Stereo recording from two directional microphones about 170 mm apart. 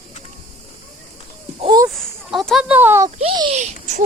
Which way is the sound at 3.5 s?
45° right (ahead or behind).